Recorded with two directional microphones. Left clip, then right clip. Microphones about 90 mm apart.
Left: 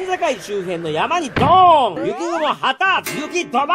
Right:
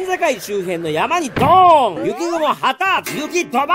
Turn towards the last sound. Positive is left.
turn(degrees=-35)  # may be behind; listen again after turning